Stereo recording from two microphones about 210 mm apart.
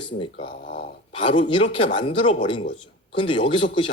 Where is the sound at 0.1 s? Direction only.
40° left (ahead or behind).